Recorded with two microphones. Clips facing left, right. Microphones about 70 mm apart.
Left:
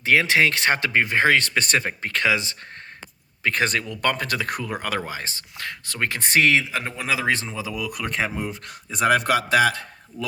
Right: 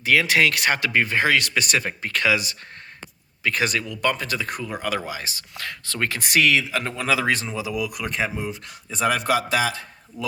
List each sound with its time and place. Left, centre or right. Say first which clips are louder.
0.0 s speech: even; left
5.5 s speech: even; left
6.1 s speech: left 1 dB; left
8.1 s speech: even; left